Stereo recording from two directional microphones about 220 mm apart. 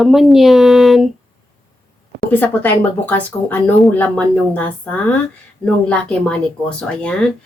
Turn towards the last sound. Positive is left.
turn(degrees=5)  # may be behind; listen again after turning